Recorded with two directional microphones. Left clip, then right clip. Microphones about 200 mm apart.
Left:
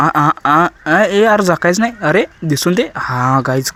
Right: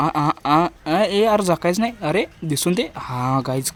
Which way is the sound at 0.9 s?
5° left (ahead or behind).